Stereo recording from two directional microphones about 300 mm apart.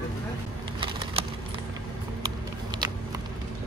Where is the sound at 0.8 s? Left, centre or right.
Centre.